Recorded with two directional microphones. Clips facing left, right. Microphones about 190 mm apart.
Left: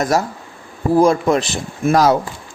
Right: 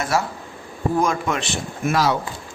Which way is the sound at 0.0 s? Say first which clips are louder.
Left 5 dB; 40° left (ahead or behind).